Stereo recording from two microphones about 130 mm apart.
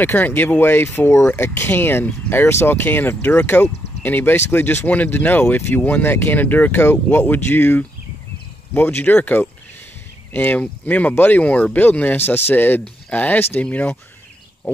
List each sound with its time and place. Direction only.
0.0 s speech: 15° left (ahead or behind)